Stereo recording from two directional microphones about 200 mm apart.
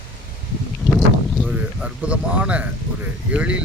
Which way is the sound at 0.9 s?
Centre (ahead or behind).